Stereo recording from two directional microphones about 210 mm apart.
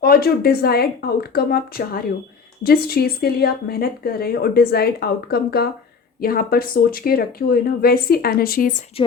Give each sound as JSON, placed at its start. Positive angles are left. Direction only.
{"t": 0.0, "sound": "a woman's voice", "side_deg": 45}
{"t": 9.0, "sound": "a woman's voice", "side_deg": 25}